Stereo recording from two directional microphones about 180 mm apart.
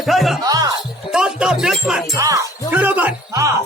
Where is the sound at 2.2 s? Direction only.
15° right (ahead or behind).